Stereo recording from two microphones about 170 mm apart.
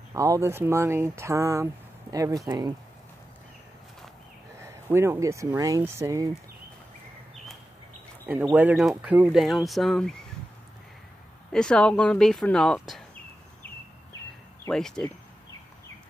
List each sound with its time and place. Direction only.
0.1 s speech: 20° right (ahead or behind)
4.6 s speech: 15° right (ahead or behind)
8.3 s speech: 10° right (ahead or behind)
11.5 s speech: 5° left (ahead or behind)
14.7 s speech: 5° left (ahead or behind)